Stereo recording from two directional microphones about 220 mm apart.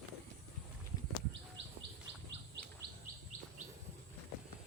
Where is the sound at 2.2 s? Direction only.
50° right (ahead or behind).